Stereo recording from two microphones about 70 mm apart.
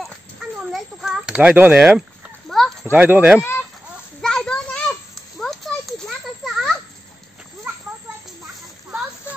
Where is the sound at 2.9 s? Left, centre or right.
Right.